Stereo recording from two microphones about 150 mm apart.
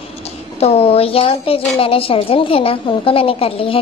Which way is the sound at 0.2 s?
40° left (ahead or behind).